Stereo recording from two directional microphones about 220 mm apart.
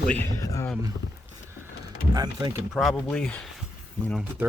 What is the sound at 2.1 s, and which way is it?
Speech, 20° right (ahead or behind).